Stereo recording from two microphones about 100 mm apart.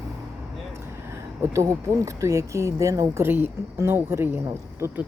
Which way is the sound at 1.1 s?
30° right (ahead or behind).